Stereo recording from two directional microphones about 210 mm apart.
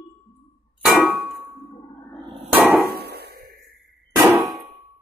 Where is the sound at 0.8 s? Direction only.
Centre (ahead or behind).